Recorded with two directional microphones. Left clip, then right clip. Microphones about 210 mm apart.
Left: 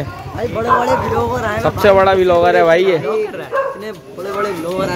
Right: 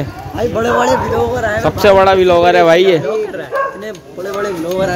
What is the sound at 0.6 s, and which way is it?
Speech, 25° right (ahead or behind).